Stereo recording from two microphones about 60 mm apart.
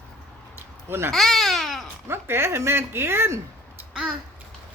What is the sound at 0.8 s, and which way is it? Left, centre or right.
Speech, right.